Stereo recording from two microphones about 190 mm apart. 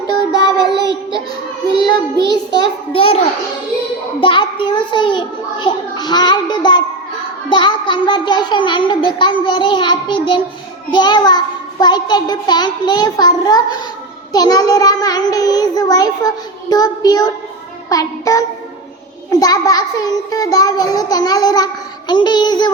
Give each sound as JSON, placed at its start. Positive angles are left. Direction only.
{"t": 0.1, "sound": "child singing", "side_deg": 20}
{"t": 1.8, "sound": "music", "side_deg": 20}
{"t": 2.3, "sound": "child singing", "side_deg": 20}
{"t": 4.2, "sound": "a child's voice", "side_deg": 25}
{"t": 17.8, "sound": "child singing", "side_deg": 20}
{"t": 19.3, "sound": "a child's voice", "side_deg": 20}